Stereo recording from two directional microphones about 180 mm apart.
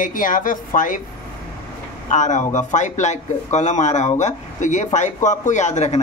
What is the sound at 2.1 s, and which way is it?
A man's voice, 45° left (ahead or behind).